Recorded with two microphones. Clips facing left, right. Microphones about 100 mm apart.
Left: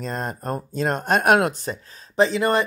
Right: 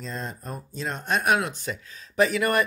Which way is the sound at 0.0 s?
55° left (ahead or behind).